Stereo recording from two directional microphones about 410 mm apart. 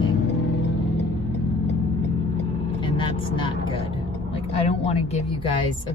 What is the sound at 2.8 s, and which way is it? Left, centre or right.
Speech, centre.